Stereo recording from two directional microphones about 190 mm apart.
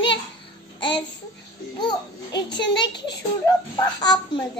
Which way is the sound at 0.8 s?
25° left (ahead or behind).